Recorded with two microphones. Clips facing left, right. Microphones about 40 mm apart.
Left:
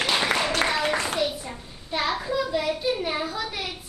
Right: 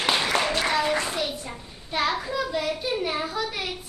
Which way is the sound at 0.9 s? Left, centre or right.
Left.